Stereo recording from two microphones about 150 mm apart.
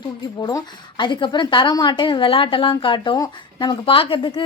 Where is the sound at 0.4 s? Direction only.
30° left (ahead or behind).